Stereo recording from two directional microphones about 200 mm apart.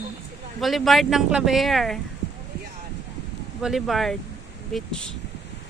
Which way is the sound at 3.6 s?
Centre (ahead or behind).